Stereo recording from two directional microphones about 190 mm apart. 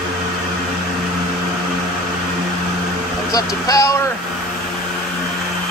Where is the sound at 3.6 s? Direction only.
15° left (ahead or behind).